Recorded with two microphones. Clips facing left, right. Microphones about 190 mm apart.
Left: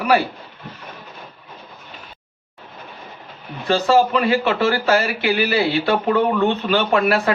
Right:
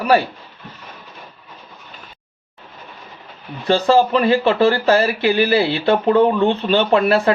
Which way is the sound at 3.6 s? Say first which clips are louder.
Right 2 dB; 30° right (ahead or behind).